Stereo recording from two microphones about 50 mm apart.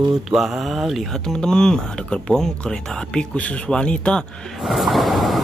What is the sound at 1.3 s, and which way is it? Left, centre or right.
Speech, centre.